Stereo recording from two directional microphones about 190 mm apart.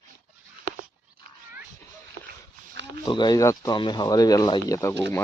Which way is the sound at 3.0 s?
20° left (ahead or behind).